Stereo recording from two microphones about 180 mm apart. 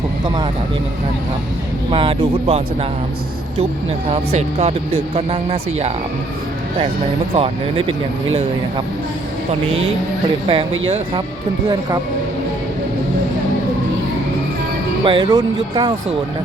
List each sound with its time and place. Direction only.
1.9 s speech: 30° right (ahead or behind)
4.1 s speech: 35° right (ahead or behind)
7.3 s speech: 30° right (ahead or behind)
10.5 s speech: 30° right (ahead or behind)
15.0 s speech: 25° right (ahead or behind)